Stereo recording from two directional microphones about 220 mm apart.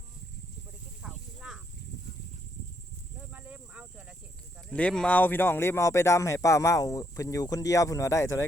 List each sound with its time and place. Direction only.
1.0 s snake: centre (ahead or behind)
3.3 s snake: 5° right (ahead or behind)
4.7 s speech: 5° left (ahead or behind)